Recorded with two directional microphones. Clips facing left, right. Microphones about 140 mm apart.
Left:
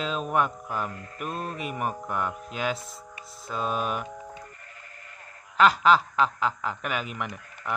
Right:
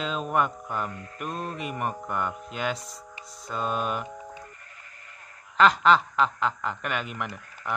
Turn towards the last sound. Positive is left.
turn(degrees=0)  # may be behind; listen again after turning